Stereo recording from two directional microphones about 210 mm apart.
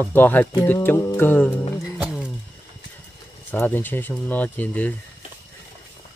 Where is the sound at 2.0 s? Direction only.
5° right (ahead or behind).